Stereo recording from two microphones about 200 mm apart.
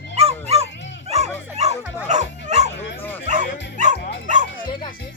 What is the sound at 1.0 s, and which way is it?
Bow-wow, 35° right (ahead or behind).